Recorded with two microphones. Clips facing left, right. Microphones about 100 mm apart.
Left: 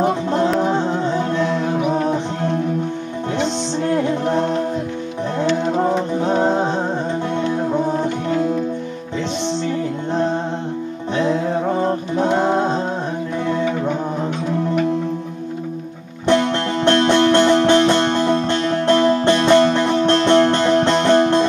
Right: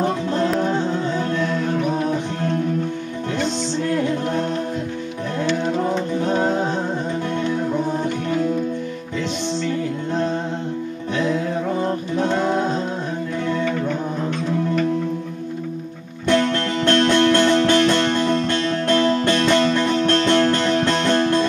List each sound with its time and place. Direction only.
0.0 s music: 20° left (ahead or behind)
11.1 s music: 30° left (ahead or behind)
13.5 s music: 15° left (ahead or behind)
16.3 s music: 20° left (ahead or behind)